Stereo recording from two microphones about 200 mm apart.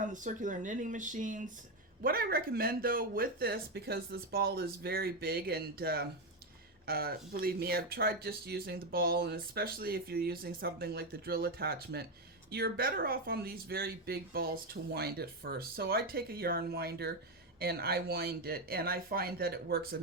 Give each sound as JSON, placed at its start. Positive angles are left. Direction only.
{"t": 0.0, "sound": "speech", "side_deg": -40}